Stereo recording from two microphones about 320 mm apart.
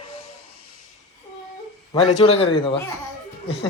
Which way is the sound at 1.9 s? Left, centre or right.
Centre.